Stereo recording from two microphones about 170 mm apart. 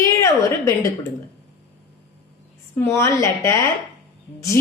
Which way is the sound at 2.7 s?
15° left (ahead or behind).